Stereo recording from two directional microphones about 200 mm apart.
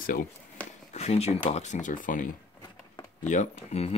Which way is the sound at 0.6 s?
5° left (ahead or behind).